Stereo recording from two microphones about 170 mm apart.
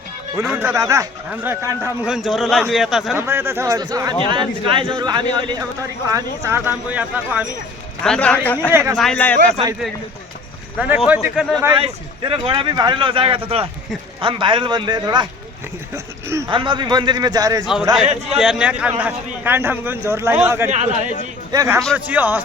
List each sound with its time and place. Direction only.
0.4 s a man's voice: 5° right (ahead or behind)
0.7 s a man's voice: 20° right (ahead or behind)
2.0 s a man's voice: 5° right (ahead or behind)
3.2 s a man's voice: 15° right (ahead or behind)
8.0 s a man's voice: 5° left (ahead or behind)
8.7 s a man's voice: 15° right (ahead or behind)
9.0 s speech: 5° left (ahead or behind)
10.8 s a man's voice: 5° right (ahead or behind)
11.7 s speech: 30° right (ahead or behind)
16.5 s speech: 30° right (ahead or behind)
18.3 s a man's voice: 5° right (ahead or behind)
20.7 s a man's voice: 45° right (ahead or behind)
21.5 s a man's voice: 20° right (ahead or behind)